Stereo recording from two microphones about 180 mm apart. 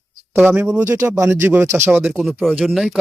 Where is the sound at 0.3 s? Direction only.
10° right (ahead or behind).